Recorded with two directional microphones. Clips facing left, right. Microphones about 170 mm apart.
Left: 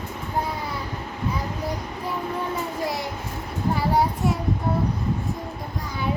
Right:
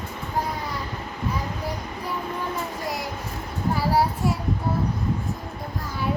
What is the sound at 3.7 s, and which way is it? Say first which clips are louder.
Child singing: even; 5° right (ahead or behind).